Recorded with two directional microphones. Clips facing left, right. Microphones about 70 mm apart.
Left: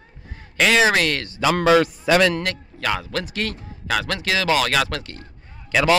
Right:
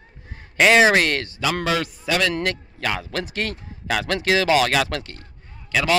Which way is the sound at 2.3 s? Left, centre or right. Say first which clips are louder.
Right 1 dB; centre.